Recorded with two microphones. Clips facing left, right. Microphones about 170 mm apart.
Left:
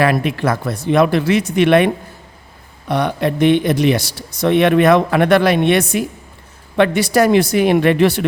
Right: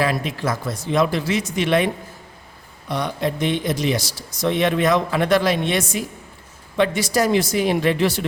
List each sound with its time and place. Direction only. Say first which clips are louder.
0.0 s speech: left 6 dB; 65° left (ahead or behind)
2.9 s speech: left 6 dB; 65° left (ahead or behind)